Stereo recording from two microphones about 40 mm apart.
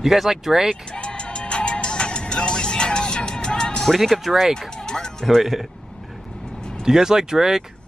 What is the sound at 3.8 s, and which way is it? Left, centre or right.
Speech, centre.